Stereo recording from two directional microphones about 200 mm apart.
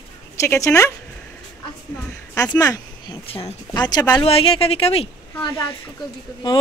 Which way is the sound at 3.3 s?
30° left (ahead or behind).